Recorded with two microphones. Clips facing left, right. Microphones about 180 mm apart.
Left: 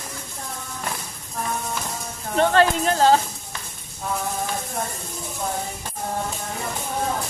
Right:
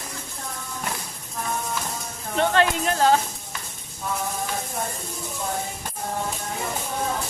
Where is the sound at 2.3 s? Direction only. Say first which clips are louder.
Left 3 dB; 35° left (ahead or behind).